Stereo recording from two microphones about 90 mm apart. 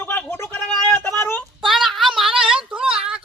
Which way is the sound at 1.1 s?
25° left (ahead or behind).